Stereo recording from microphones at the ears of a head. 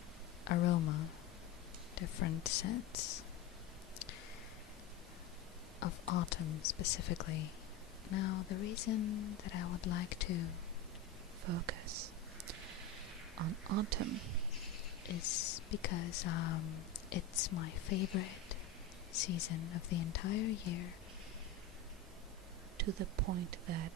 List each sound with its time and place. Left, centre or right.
0.5 s speech: left
5.8 s speech: left
11.4 s whispering: right
13.4 s speech: right
15.0 s speech: left
22.8 s speech: right